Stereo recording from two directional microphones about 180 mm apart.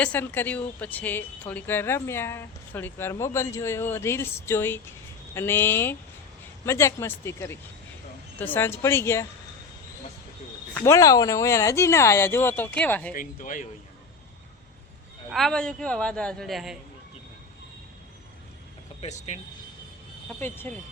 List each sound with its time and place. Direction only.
0.0 s speech: 10° left (ahead or behind)
10.8 s speech: 15° left (ahead or behind)
13.1 s speech: 45° left (ahead or behind)
15.3 s a man's voice: centre (ahead or behind)
19.0 s speech: 40° left (ahead or behind)
20.4 s speech: 10° left (ahead or behind)